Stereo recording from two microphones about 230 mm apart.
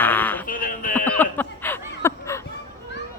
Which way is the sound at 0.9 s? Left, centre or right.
Centre.